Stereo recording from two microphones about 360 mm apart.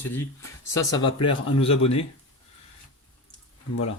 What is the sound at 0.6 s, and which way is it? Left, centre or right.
Speech, centre.